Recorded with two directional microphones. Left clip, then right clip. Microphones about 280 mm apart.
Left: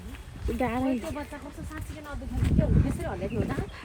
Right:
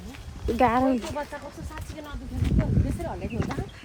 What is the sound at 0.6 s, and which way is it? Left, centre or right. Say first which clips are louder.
Speech: right 8 dB; right.